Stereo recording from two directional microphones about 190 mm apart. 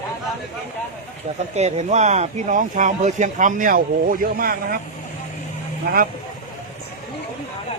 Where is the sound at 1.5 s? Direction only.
35° right (ahead or behind).